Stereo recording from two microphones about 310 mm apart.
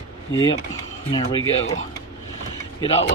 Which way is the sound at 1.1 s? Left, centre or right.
Centre.